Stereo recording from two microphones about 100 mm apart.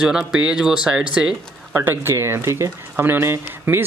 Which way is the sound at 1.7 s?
20° right (ahead or behind).